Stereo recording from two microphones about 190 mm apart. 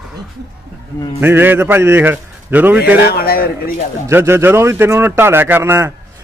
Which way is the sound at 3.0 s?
55° left (ahead or behind).